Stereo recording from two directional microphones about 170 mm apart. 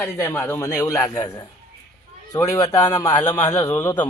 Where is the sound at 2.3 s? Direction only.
20° left (ahead or behind).